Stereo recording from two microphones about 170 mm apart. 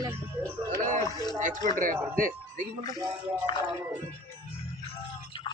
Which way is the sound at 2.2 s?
55° right (ahead or behind).